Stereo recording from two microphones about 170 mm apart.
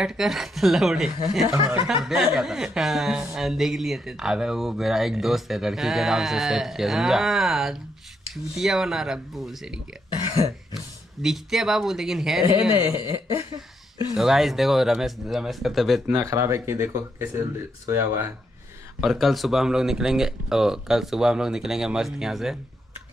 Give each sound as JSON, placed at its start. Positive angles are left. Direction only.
{"t": 0.0, "sound": "speech", "side_deg": 0}
{"t": 11.2, "sound": "speech", "side_deg": 0}
{"t": 12.7, "sound": "speech", "side_deg": 25}
{"t": 14.1, "sound": "speech", "side_deg": 0}
{"t": 16.2, "sound": "speech", "side_deg": -15}
{"t": 18.9, "sound": "speech", "side_deg": 0}